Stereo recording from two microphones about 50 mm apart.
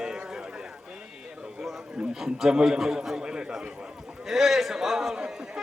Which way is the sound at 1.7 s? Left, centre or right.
Centre.